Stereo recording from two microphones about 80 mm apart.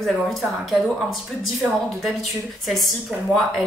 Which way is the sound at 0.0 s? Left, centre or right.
Centre.